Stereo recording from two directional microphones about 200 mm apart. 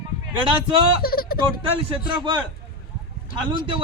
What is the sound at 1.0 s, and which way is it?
Speech, 50° left (ahead or behind).